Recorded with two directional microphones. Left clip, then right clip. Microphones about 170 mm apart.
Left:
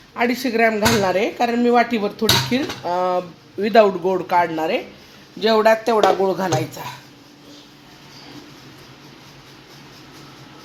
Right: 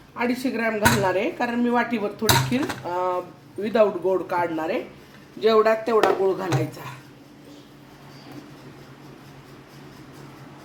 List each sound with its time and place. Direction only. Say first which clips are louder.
0.2 s speech: left 7 dB; 60° left (ahead or behind)